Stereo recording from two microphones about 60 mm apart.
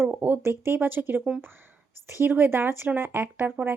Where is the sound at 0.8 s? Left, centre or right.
Right.